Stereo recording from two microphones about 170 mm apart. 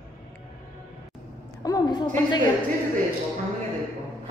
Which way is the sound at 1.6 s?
25° left (ahead or behind).